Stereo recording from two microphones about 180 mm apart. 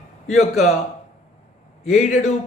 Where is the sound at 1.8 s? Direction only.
40° left (ahead or behind).